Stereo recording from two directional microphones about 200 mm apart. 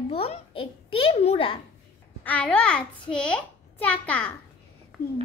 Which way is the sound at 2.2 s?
5° left (ahead or behind).